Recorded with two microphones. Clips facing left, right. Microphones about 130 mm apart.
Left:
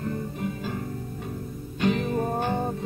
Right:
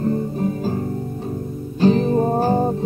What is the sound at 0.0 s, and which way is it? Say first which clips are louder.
Music: right 9 dB; 35° right (ahead or behind).